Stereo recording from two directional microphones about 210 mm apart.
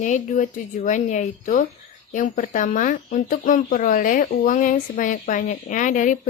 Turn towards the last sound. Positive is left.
turn(degrees=35)  # may be behind; listen again after turning